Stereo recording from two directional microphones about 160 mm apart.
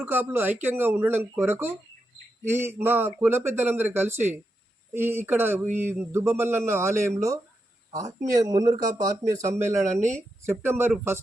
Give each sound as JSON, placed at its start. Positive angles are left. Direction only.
{"t": 0.0, "sound": "a man's voice", "side_deg": -15}
{"t": 9.8, "sound": "speech", "side_deg": -50}
{"t": 10.4, "sound": "a man's voice", "side_deg": -15}